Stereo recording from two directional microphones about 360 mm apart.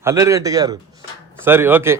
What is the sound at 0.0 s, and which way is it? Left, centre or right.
Speech, centre.